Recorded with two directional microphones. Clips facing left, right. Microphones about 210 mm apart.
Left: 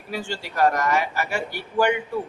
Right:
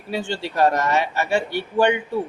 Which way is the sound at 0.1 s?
25° right (ahead or behind).